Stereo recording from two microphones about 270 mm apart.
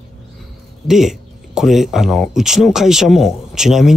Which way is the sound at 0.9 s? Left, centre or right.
Centre.